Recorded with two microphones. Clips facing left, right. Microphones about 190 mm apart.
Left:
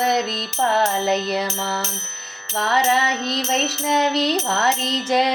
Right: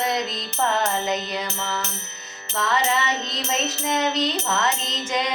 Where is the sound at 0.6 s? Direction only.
35° left (ahead or behind).